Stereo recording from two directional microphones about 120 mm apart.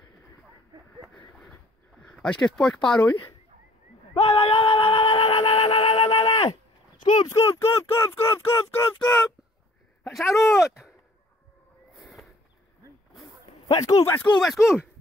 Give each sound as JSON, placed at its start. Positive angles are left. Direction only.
{"t": 2.0, "sound": "speech", "side_deg": 10}
{"t": 4.1, "sound": "a sound", "side_deg": 55}
{"t": 5.4, "sound": "a sound", "side_deg": 50}
{"t": 6.2, "sound": "speech", "side_deg": 30}
{"t": 9.0, "sound": "speech", "side_deg": 5}
{"t": 10.3, "sound": "speech", "side_deg": 0}
{"t": 12.0, "sound": "a sound", "side_deg": 0}
{"t": 13.7, "sound": "speech", "side_deg": 30}
{"t": 14.0, "sound": "speech", "side_deg": 20}
{"t": 14.4, "sound": "speech", "side_deg": 0}